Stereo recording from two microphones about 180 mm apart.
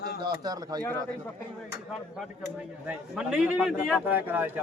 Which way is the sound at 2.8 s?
5° right (ahead or behind).